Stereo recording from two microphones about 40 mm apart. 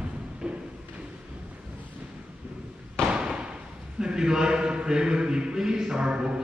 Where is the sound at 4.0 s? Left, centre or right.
Centre.